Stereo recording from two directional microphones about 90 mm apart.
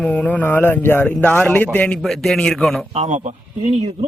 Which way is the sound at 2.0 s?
5° left (ahead or behind).